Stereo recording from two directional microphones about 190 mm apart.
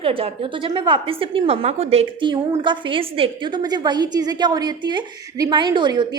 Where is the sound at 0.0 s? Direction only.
30° right (ahead or behind).